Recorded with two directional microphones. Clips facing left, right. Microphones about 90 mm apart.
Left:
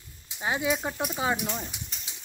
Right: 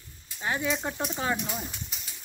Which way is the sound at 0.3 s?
15° left (ahead or behind).